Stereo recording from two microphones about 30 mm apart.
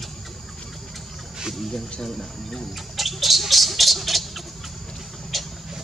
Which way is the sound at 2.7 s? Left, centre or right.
Centre.